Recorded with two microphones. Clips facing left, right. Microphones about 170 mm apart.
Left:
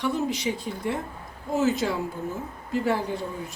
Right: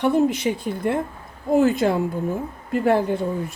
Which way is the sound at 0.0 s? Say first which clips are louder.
Right 7 dB; 55° right (ahead or behind).